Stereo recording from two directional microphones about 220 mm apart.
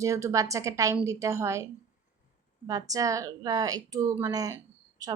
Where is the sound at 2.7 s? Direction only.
15° right (ahead or behind).